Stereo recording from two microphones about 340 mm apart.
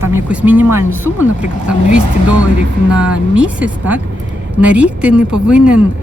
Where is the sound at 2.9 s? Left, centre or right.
Centre.